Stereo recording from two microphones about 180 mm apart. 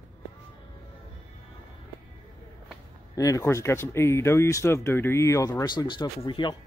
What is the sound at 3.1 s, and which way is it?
Speech, 20° left (ahead or behind).